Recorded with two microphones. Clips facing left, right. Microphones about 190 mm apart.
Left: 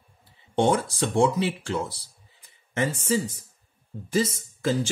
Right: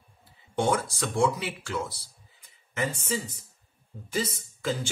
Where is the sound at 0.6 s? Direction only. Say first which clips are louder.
Left 4 dB; 25° left (ahead or behind).